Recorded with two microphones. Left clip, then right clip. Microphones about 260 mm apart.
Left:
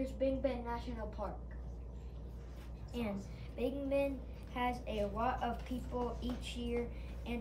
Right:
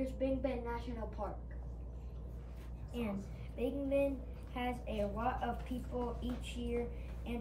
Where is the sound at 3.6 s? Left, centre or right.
Centre.